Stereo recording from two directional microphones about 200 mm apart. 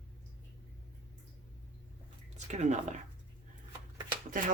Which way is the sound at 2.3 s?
35° right (ahead or behind).